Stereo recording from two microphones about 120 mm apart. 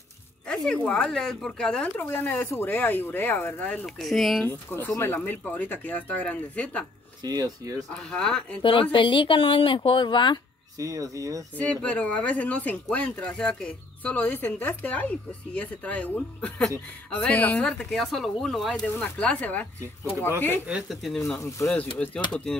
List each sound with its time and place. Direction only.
0.5 s speech: 10° left (ahead or behind)
2.0 s speech: 15° left (ahead or behind)
4.0 s speech: centre (ahead or behind)
4.5 s speech: 20° left (ahead or behind)
7.2 s speech: 30° right (ahead or behind)
8.1 s speech: 5° left (ahead or behind)
8.9 s a woman's voice: 45° left (ahead or behind)
10.8 s speech: 30° right (ahead or behind)
11.5 s speech: 10° left (ahead or behind)
20.6 s speech: 5° right (ahead or behind)
21.4 s speech: 25° left (ahead or behind)
21.9 s speech: 10° left (ahead or behind)